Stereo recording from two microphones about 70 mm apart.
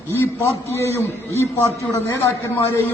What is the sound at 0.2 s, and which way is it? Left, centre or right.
A man's voice, left.